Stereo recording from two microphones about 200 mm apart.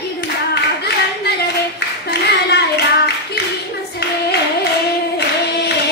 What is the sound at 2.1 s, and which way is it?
Clapping, 55° left (ahead or behind).